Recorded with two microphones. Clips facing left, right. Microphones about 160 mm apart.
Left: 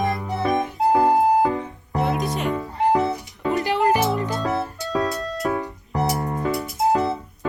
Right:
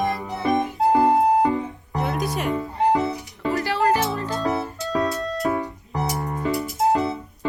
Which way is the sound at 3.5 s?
20° left (ahead or behind).